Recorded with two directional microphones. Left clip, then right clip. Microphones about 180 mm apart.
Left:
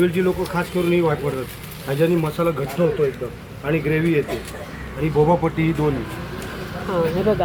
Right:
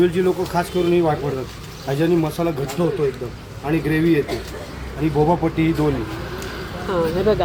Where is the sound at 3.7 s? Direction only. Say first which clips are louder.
Right 1 dB; 45° right (ahead or behind).